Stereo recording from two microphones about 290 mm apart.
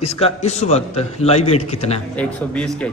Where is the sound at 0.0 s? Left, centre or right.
Left.